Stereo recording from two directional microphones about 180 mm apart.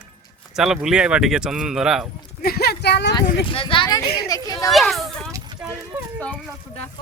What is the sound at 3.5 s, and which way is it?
Speech, 30° left (ahead or behind).